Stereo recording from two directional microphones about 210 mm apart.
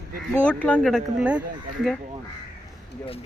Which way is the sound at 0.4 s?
5° left (ahead or behind).